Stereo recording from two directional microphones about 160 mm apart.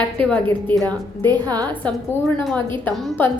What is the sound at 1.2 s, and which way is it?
Speech, 25° right (ahead or behind).